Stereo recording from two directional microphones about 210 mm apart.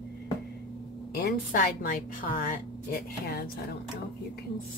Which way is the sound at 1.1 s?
45° left (ahead or behind).